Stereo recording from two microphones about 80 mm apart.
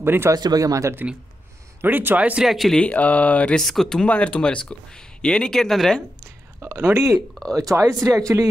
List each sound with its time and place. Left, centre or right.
0.0 s speech: right
0.3 s speech: right
1.8 s a man's voice: right
2.4 s speech: centre
2.8 s speech: centre
3.6 s speech: centre
6.9 s speech: right